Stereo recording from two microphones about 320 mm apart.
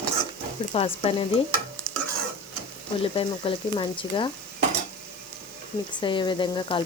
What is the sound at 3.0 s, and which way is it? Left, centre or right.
Speech, centre.